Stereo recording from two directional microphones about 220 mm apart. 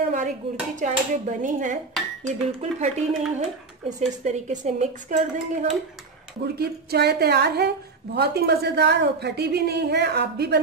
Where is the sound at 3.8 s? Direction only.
30° right (ahead or behind).